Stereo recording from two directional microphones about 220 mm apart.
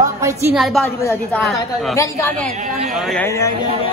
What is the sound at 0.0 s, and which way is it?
Speech, 15° right (ahead or behind).